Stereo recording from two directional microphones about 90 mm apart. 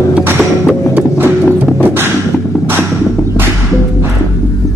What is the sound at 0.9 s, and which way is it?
Beatboxing, 20° right (ahead or behind).